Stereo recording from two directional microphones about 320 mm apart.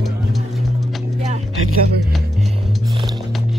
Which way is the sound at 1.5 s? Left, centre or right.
Right.